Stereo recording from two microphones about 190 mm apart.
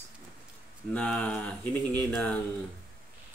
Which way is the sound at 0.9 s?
5° left (ahead or behind).